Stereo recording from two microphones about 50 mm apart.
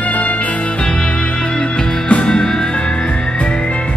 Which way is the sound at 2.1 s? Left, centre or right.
Left.